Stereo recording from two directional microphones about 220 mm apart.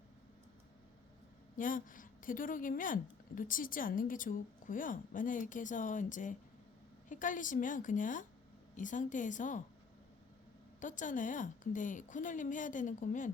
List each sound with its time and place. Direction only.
1.5 s a woman's voice: 40° left (ahead or behind)
10.8 s a woman's voice: 35° left (ahead or behind)